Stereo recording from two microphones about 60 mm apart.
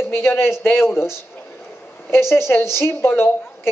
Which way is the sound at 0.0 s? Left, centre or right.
Left.